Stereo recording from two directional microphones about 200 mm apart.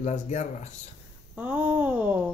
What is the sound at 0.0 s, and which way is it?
Speech, 35° left (ahead or behind).